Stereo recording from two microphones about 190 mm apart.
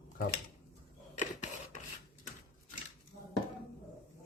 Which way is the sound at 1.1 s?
40° left (ahead or behind).